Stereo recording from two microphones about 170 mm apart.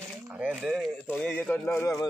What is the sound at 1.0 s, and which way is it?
A man's voice, 10° left (ahead or behind).